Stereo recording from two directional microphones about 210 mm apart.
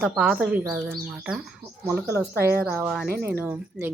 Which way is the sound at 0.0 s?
Centre (ahead or behind).